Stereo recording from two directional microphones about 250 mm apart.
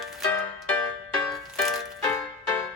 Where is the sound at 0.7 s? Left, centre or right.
Centre.